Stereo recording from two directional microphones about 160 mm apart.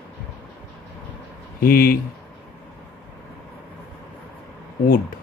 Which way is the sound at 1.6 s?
65° left (ahead or behind).